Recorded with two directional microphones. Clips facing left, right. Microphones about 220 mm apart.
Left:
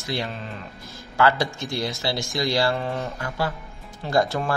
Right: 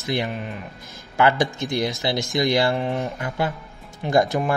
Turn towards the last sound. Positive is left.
turn(degrees=-15)  # may be behind; listen again after turning